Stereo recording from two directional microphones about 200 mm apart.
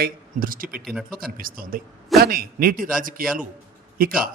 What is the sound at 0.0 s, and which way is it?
Speech, 45° right (ahead or behind).